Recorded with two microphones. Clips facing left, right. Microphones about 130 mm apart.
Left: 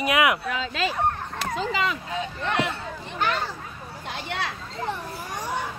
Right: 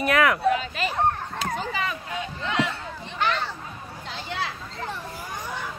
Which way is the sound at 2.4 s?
60° left (ahead or behind).